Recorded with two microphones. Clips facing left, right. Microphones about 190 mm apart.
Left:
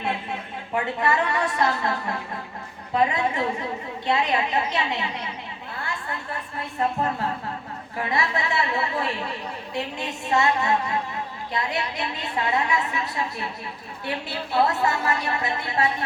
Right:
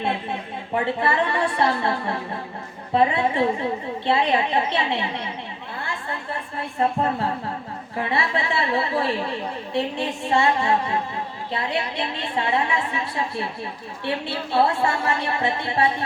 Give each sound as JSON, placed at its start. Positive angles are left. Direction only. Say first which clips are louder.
{"t": 0.9, "sound": "a woman's voice", "louder": "right 1 dB", "side_deg": -30}
{"t": 6.6, "sound": "a woman's voice", "louder": "right 3 dB", "side_deg": -30}